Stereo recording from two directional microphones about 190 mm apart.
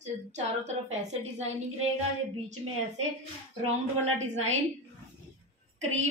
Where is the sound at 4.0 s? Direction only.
35° right (ahead or behind).